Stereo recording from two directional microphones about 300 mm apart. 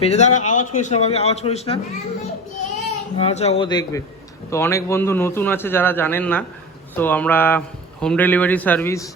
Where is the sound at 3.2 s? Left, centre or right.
Centre.